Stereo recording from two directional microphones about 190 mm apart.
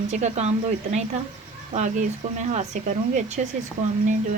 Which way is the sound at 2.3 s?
40° right (ahead or behind).